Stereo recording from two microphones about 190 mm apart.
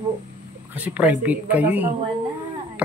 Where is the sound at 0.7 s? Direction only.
10° right (ahead or behind).